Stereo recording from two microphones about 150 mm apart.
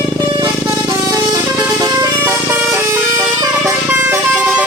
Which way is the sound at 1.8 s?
25° right (ahead or behind).